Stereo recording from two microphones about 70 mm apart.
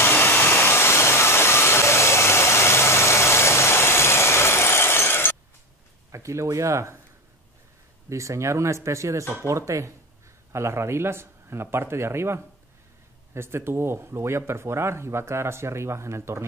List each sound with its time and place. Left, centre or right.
0.0 s a sound: left
6.1 s speech: right
8.1 s speech: right